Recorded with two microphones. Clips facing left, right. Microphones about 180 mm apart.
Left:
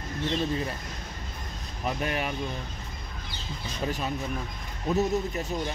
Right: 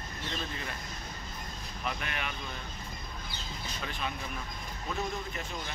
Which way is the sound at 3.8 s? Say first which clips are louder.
Left 8 dB; 40° left (ahead or behind).